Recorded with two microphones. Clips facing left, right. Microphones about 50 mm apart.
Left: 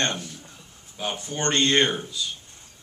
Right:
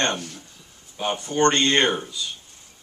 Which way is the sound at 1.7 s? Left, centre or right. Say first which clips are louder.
Right 1 dB; right.